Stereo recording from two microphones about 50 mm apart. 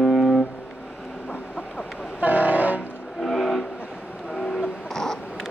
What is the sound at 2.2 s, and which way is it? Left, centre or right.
Train, right.